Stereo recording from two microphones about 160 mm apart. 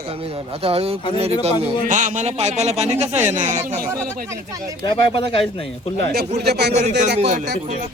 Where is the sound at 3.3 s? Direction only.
55° right (ahead or behind).